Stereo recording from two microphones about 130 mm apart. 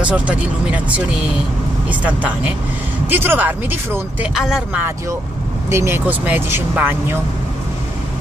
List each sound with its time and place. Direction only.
0.0 s speech: 10° right (ahead or behind)
5.7 s speech: 20° right (ahead or behind)